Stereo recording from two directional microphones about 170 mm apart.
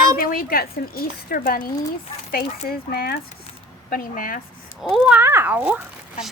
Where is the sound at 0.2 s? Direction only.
60° left (ahead or behind).